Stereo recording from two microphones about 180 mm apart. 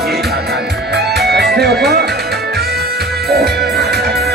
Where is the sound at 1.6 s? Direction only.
65° right (ahead or behind).